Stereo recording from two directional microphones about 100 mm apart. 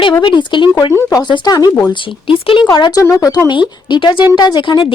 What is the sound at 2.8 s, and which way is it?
Speech, 45° left (ahead or behind).